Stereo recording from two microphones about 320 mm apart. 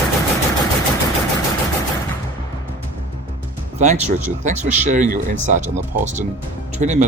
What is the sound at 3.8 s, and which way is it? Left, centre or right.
Speech, right.